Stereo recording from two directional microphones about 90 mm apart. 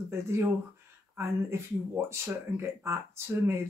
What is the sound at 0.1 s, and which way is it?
Speech, 30° right (ahead or behind).